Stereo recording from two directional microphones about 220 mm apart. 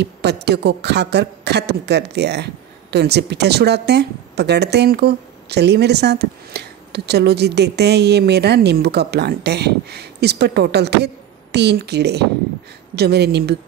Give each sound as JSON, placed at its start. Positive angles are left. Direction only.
{"t": 0.0, "sound": "speech", "side_deg": -50}